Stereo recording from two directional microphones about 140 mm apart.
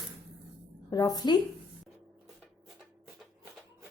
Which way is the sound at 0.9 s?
30° left (ahead or behind).